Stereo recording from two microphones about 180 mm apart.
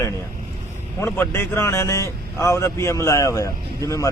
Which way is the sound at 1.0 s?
15° left (ahead or behind).